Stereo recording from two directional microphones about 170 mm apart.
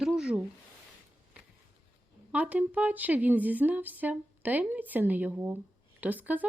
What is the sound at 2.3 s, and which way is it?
Speech, 10° right (ahead or behind).